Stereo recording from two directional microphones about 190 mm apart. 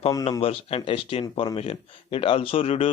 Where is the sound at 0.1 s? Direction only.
20° left (ahead or behind).